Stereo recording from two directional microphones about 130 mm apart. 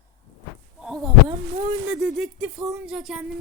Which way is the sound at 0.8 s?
5° right (ahead or behind).